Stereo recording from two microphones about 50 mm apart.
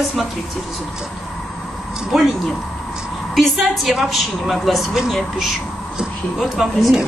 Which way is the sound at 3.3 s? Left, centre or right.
Centre.